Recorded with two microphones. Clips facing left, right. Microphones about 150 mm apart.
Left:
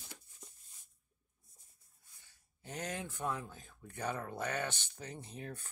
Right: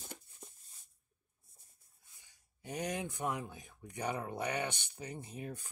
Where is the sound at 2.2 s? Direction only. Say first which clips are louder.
Right 4 dB; 15° right (ahead or behind).